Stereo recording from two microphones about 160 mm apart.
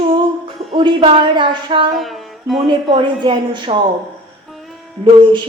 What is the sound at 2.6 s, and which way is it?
A woman's voice, 30° right (ahead or behind).